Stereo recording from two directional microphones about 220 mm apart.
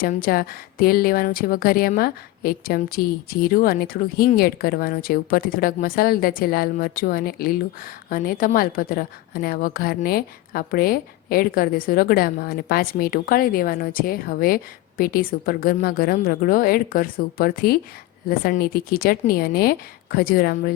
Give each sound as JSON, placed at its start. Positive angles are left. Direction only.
{"t": 0.0, "sound": "a woman's voice", "side_deg": 40}